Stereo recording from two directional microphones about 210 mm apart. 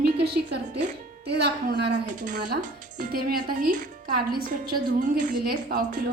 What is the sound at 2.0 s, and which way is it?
A woman's voice, 35° right (ahead or behind).